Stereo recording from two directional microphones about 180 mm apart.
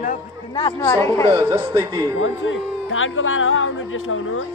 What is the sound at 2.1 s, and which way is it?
A man's voice, 90° left.